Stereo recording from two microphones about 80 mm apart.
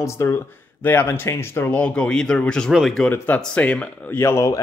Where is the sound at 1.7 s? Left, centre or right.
Centre.